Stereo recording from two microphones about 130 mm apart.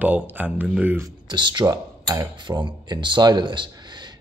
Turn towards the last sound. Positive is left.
turn(degrees=-35)  # may be behind; listen again after turning